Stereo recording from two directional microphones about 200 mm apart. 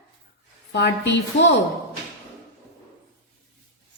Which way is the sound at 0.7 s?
60° left (ahead or behind).